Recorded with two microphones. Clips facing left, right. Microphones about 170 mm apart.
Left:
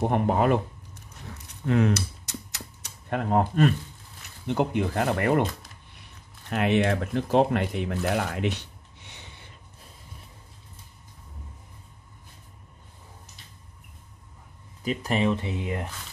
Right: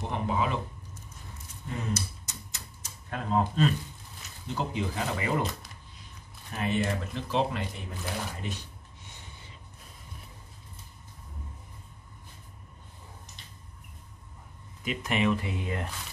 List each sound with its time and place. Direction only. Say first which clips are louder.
0.0 s a sound: left 7 dB; 55° left (ahead or behind)
4.5 s speech: left 7 dB; 60° left (ahead or behind)
6.5 s speech: left 6 dB; 75° left (ahead or behind)
14.9 s speech: left 3 dB; 35° left (ahead or behind); by 15.9 s 20° left (ahead or behind)